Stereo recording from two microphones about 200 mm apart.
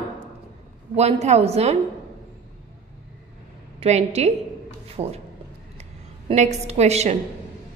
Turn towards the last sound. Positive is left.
turn(degrees=-35)  # may be behind; listen again after turning